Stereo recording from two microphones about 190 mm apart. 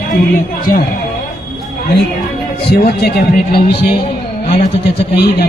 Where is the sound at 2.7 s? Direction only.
55° left (ahead or behind).